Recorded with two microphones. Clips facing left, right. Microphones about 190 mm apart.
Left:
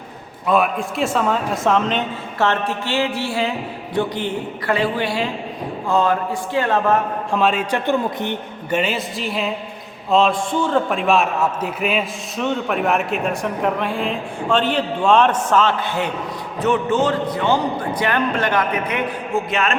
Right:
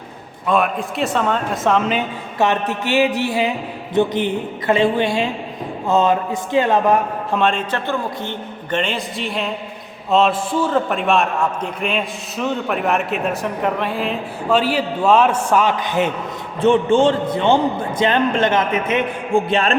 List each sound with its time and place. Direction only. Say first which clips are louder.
0.4 s a man's voice: even; centre (ahead or behind); by 3.1 s 15° right (ahead or behind)
3.2 s a sound: right 3 dB; 15° right (ahead or behind)
3.9 s a man's voice: right 4 dB; 20° right (ahead or behind)
7.3 s a man's voice: even; centre (ahead or behind)
7.7 s a man's voice: left 3 dB; 15° left (ahead or behind)
8.8 s a man's voice: left 1 dB; 5° left (ahead or behind); by 19.7 s 30° right (ahead or behind)